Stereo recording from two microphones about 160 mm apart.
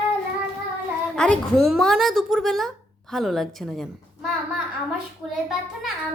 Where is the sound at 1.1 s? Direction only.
5° left (ahead or behind).